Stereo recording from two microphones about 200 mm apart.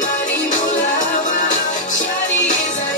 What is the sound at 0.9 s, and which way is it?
Music, 35° left (ahead or behind).